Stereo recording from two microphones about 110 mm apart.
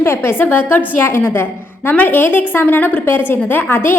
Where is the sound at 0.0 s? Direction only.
20° left (ahead or behind).